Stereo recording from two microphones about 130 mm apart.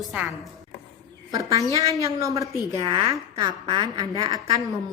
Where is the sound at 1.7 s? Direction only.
25° right (ahead or behind).